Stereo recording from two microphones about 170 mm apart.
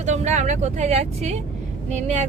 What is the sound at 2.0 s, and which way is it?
Female singing, 45° right (ahead or behind).